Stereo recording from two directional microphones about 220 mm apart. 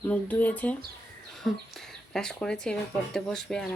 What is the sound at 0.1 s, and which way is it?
Speech, 5° left (ahead or behind).